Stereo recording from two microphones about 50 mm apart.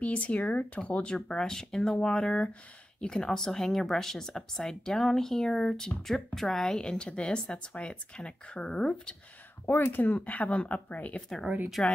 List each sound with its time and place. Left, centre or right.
0.0 s speech: left; by 6.7 s centre
6.7 s speech: centre
9.7 s speech: left
11.4 s speech: right